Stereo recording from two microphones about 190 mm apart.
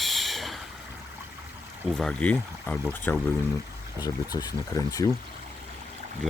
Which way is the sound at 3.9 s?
20° left (ahead or behind).